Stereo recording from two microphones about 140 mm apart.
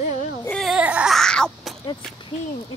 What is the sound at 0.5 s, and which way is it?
Baby cry, centre (ahead or behind).